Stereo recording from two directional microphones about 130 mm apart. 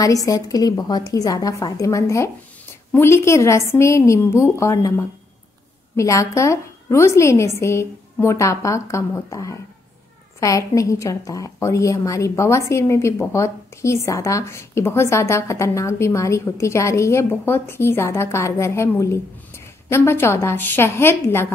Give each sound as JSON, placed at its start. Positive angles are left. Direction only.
{"t": 0.0, "sound": "a woman's voice", "side_deg": 25}